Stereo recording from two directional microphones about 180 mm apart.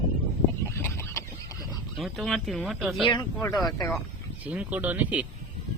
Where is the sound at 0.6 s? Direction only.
15° left (ahead or behind).